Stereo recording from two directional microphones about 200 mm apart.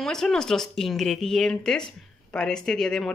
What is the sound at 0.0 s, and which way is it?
Speech, 5° left (ahead or behind).